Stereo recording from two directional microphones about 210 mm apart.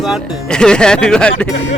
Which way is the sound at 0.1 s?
5° left (ahead or behind).